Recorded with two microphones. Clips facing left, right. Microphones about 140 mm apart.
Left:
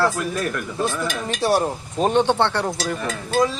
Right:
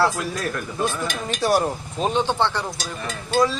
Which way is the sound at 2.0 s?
60° left (ahead or behind).